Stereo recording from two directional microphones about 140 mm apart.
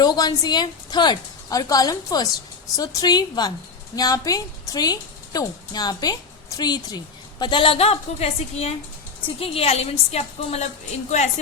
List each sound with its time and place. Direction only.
0.0 s a woman's voice: 30° left (ahead or behind); by 10.7 s 50° left (ahead or behind)